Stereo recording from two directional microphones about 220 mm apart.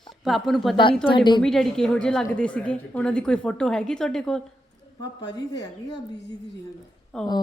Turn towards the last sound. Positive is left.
turn(degrees=0)  # may be behind; listen again after turning